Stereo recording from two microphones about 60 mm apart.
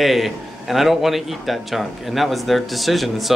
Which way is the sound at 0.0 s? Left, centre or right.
Centre.